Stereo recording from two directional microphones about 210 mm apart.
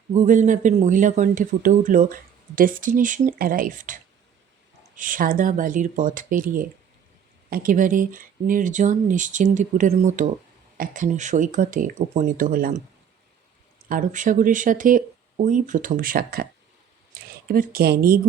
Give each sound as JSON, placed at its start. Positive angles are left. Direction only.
{"t": 0.1, "sound": "speech", "side_deg": -35}
{"t": 13.8, "sound": "speech", "side_deg": -40}
{"t": 17.5, "sound": "speech", "side_deg": -45}